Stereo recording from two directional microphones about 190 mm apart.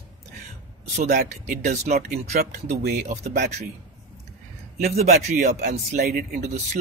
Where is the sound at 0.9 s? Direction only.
45° right (ahead or behind).